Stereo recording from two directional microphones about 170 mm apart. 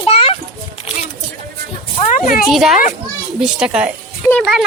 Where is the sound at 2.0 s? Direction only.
50° left (ahead or behind).